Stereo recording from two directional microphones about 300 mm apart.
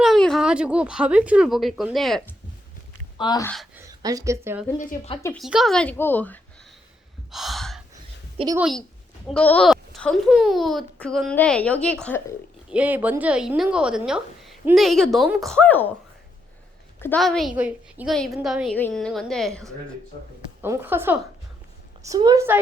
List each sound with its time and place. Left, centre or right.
0.0 s speech: centre
3.2 s speech: centre
3.5 s speech: centre
3.8 s speech: centre
4.8 s speech: left
5.3 s a woman's voice: centre
7.3 s gasp: centre
8.4 s a woman's voice: centre
9.2 s a woman's voice: centre
17.0 s a woman's voice: centre